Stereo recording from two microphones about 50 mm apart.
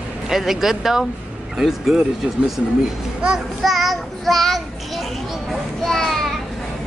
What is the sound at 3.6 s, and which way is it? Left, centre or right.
A woman's voice, centre.